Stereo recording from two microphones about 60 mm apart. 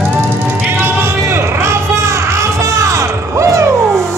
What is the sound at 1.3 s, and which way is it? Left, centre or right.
Music, right.